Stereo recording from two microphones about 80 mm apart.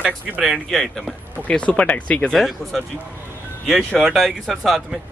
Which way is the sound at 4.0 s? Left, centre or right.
Centre.